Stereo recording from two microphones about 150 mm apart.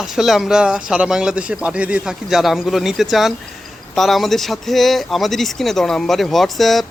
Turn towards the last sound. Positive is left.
turn(degrees=0)  # may be behind; listen again after turning